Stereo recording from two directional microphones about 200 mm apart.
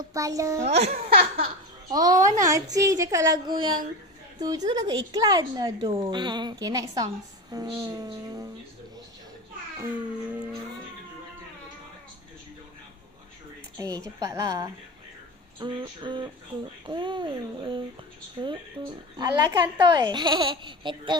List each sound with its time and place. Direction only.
0.1 s a woman's voice: 15° right (ahead or behind)
0.6 s speech: 35° right (ahead or behind)
0.9 s a sound: 50° right (ahead or behind)
1.3 s a sound: 30° right (ahead or behind)
2.0 s a woman's voice: 15° right (ahead or behind)
13.7 s a woman's voice: 15° right (ahead or behind)